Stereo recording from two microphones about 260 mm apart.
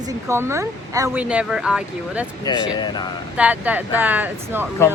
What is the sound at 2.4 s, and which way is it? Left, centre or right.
Speech, centre.